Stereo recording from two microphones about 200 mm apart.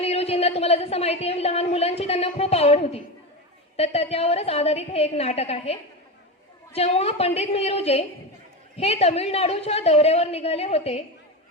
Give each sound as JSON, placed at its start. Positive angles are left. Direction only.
{"t": 0.0, "sound": "a woman's voice", "side_deg": 30}